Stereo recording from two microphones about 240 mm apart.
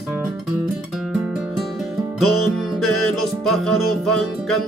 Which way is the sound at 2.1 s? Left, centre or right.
Centre.